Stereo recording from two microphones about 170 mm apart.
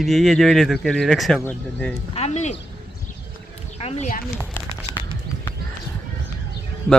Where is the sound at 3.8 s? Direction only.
40° left (ahead or behind).